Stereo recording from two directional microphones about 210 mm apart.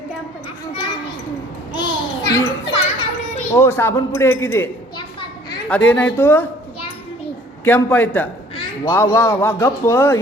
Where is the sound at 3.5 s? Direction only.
10° left (ahead or behind).